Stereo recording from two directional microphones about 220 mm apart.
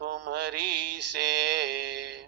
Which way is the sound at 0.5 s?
90° right.